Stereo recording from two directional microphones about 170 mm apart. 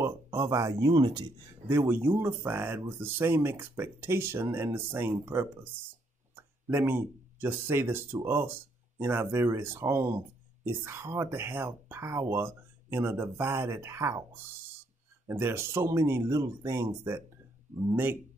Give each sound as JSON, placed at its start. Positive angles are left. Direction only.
{"t": 0.0, "sound": "speech", "side_deg": -15}
{"t": 1.7, "sound": "speech", "side_deg": -15}